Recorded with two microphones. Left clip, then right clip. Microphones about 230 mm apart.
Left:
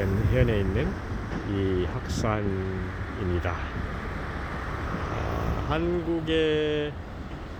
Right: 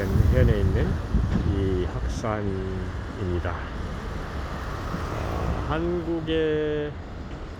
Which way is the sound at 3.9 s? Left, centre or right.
Right.